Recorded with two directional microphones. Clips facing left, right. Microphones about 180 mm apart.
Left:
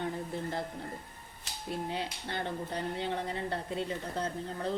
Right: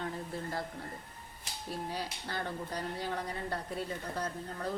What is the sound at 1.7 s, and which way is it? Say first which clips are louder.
Speech: left 3 dB; 25° left (ahead or behind).